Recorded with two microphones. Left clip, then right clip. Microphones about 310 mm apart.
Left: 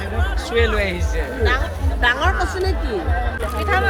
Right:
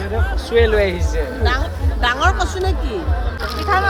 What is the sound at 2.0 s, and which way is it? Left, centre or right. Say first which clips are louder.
Speech: right 1 dB; right.